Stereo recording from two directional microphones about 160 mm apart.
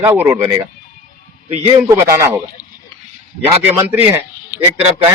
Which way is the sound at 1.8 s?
20° right (ahead or behind).